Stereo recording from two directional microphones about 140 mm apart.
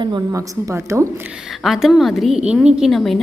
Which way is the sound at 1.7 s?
Centre (ahead or behind).